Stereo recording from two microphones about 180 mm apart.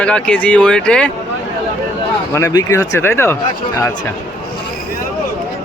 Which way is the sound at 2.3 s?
20° left (ahead or behind).